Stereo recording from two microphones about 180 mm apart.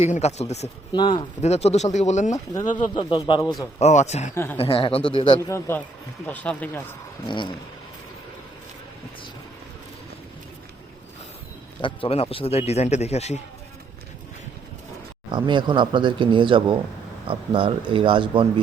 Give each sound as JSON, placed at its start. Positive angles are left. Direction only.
{"t": 0.0, "sound": "a man's voice", "side_deg": 35}
{"t": 0.9, "sound": "a man's voice", "side_deg": 25}
{"t": 2.7, "sound": "speech", "side_deg": 25}
{"t": 3.8, "sound": "a man's voice", "side_deg": 40}
{"t": 5.5, "sound": "speech", "side_deg": 15}
{"t": 7.3, "sound": "speech", "side_deg": 25}
{"t": 11.8, "sound": "a man's voice", "side_deg": 30}
{"t": 15.3, "sound": "speech", "side_deg": -25}